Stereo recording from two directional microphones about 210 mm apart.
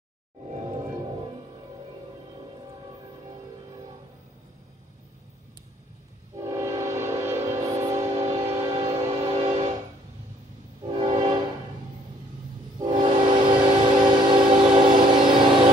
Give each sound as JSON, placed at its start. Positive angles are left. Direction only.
{"t": 0.5, "sound": "music", "side_deg": -20}
{"t": 6.4, "sound": "train", "side_deg": -15}
{"t": 10.9, "sound": "train", "side_deg": -25}
{"t": 12.7, "sound": "train", "side_deg": -20}
{"t": 14.0, "sound": "a sound", "side_deg": -20}
{"t": 14.8, "sound": "train", "side_deg": -20}